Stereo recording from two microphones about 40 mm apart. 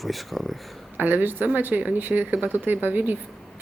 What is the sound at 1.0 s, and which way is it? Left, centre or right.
Speech, right.